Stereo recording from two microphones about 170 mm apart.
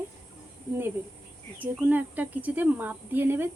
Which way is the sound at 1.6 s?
10° right (ahead or behind).